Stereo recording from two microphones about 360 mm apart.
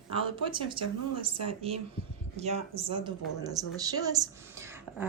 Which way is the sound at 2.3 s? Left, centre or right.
Centre.